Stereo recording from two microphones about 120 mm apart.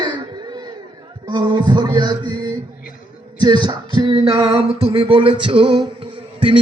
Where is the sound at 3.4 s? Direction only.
40° right (ahead or behind).